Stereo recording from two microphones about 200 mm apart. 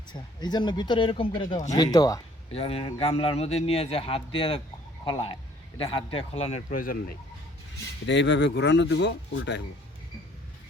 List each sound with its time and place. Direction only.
0.1 s speech: 20° left (ahead or behind)
2.5 s speech: 30° left (ahead or behind); by 7.2 s 45° left (ahead or behind)
8.0 s speech: 65° left (ahead or behind)